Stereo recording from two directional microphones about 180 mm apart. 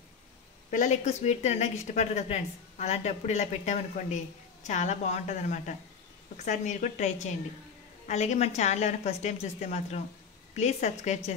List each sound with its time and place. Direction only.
0.7 s speech: 40° left (ahead or behind)